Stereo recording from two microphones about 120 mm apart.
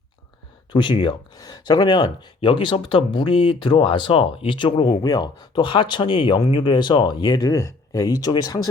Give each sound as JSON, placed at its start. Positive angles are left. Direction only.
{"t": 0.7, "sound": "speech", "side_deg": 40}